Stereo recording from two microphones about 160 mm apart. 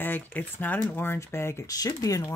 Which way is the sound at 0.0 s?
10° left (ahead or behind).